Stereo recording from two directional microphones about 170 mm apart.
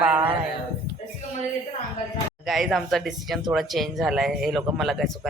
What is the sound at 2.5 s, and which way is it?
Speech, centre (ahead or behind).